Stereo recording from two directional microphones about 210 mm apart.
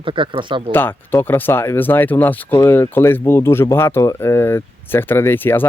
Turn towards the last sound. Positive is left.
turn(degrees=10)  # may be behind; listen again after turning